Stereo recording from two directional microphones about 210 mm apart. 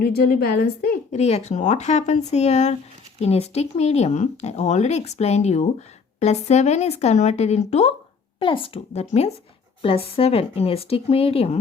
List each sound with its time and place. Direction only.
0.0 s a woman's voice: 45° left (ahead or behind)
1.1 s speech: 30° left (ahead or behind)